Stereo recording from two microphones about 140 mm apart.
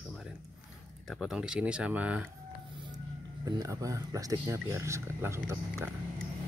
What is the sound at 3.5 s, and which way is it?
Speech, 25° right (ahead or behind).